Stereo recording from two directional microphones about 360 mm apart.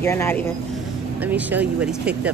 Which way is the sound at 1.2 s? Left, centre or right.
Centre.